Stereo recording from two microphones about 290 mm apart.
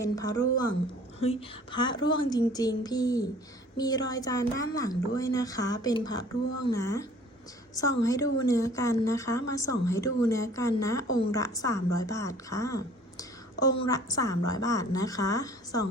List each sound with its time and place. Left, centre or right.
0.0 s speech: centre